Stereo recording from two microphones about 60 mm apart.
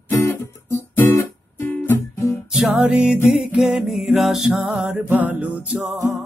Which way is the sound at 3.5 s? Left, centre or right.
Centre.